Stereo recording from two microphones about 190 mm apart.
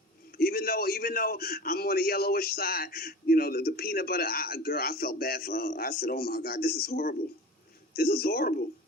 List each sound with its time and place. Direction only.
0.3 s a man's voice: 55° left (ahead or behind)